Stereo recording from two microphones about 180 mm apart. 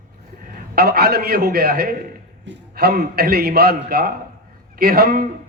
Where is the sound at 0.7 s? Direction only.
60° right (ahead or behind).